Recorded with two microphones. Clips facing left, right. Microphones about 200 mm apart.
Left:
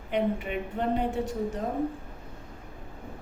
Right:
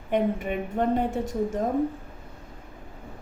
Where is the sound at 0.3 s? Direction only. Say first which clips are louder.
Right 4 dB; 45° right (ahead or behind).